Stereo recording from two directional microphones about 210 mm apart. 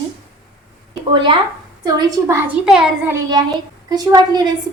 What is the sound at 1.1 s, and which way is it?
A woman's voice, 25° right (ahead or behind).